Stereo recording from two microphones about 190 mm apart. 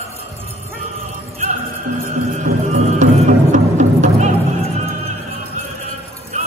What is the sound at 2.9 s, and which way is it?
Music, 40° right (ahead or behind).